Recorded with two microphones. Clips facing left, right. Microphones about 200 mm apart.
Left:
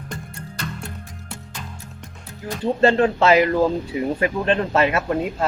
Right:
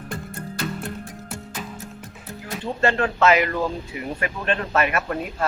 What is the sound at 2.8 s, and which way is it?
Speech, 30° left (ahead or behind).